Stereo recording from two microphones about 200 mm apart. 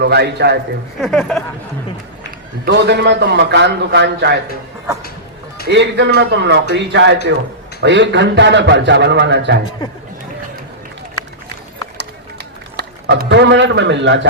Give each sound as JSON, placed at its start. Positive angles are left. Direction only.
{"t": 0.0, "sound": "a man's voice", "side_deg": -55}
{"t": 1.0, "sound": "speech", "side_deg": 0}
{"t": 2.6, "sound": "a man's voice", "side_deg": -55}
{"t": 5.6, "sound": "a man's voice", "side_deg": -60}
{"t": 11.9, "sound": "run", "side_deg": -55}